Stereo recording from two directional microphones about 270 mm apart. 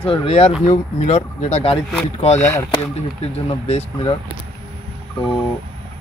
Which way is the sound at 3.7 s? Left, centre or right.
Left.